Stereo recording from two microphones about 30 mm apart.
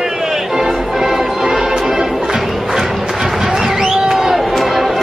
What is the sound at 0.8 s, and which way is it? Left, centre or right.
Music, centre.